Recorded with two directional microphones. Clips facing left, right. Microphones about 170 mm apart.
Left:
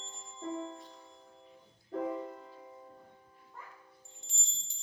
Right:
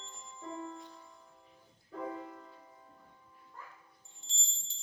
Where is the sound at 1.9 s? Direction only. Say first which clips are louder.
Left 6 dB; 45° left (ahead or behind).